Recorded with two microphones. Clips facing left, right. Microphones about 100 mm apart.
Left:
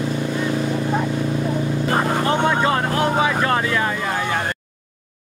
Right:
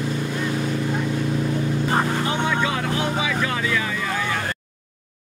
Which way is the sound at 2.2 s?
50° left (ahead or behind).